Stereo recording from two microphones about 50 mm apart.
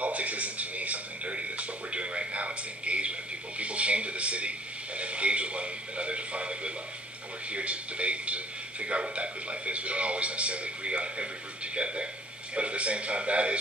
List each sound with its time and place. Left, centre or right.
0.0 s television: right
7.5 s a man's voice: right